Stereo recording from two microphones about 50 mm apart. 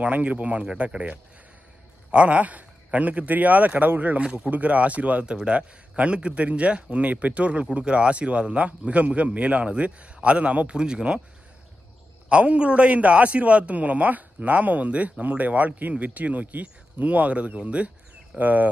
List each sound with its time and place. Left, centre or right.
0.0 s a man's voice: right
4.2 s a man's voice: right
10.8 s speech: centre
12.3 s a man's voice: right